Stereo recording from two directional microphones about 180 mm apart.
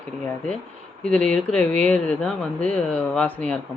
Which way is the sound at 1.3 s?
5° left (ahead or behind).